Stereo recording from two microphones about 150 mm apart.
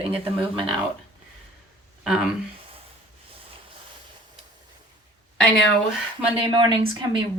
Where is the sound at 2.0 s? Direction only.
5° right (ahead or behind).